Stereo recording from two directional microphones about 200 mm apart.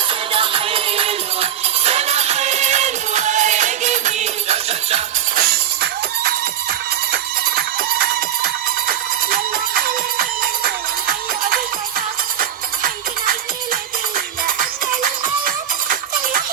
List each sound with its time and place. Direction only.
0.1 s music: 25° right (ahead or behind)
5.4 s music: 50° right (ahead or behind)
14.4 s music: 45° right (ahead or behind)